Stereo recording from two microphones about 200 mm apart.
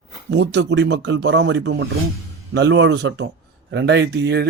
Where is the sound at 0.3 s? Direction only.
60° right (ahead or behind).